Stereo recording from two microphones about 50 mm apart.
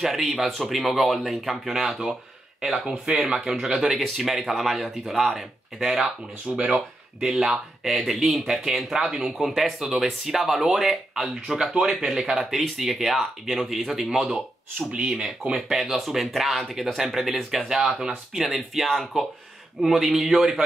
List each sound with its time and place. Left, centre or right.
0.0 s speech: centre
3.3 s speech: centre
15.5 s speech: centre
17.6 s speech: centre